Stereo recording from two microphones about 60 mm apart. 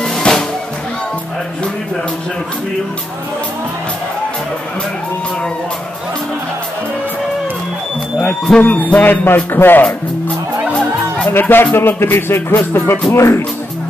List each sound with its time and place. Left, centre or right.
0.0 s music: centre
8.2 s music: centre; by 9.8 s left
11.3 s music: left
13.1 s speech: left